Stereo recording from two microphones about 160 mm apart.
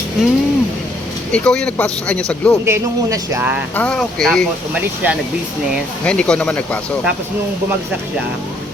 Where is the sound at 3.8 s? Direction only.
5° left (ahead or behind).